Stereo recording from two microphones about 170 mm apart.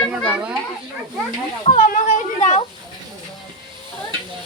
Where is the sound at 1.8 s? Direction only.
50° left (ahead or behind).